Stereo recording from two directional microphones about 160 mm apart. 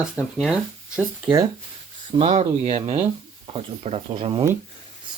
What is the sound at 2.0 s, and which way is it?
Speech, 35° right (ahead or behind).